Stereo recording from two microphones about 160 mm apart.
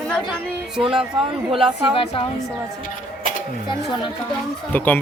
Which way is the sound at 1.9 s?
35° left (ahead or behind).